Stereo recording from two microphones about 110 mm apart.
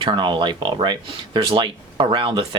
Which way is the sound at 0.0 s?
50° right (ahead or behind).